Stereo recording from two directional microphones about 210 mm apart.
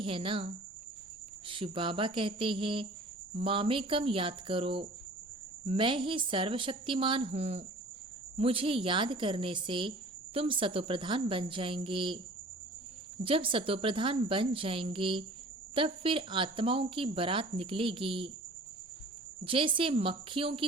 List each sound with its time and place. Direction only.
0.0 s speech: 25° right (ahead or behind)
13.2 s speech: 25° right (ahead or behind)
19.5 s speech: 25° right (ahead or behind)